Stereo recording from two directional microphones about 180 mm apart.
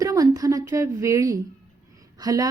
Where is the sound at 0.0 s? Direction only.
20° right (ahead or behind).